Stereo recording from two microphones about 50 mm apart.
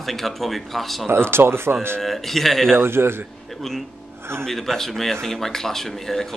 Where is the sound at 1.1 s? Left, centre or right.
Right.